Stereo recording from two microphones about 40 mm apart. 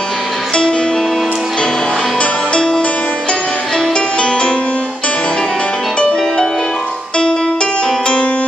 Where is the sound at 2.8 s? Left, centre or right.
Left.